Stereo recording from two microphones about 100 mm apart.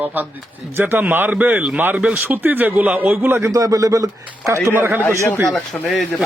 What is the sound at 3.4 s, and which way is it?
Speech, 35° right (ahead or behind).